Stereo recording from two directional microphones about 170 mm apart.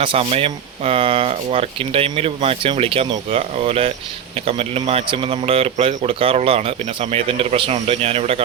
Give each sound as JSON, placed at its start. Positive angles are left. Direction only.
{"t": 0.0, "sound": "speech", "side_deg": -35}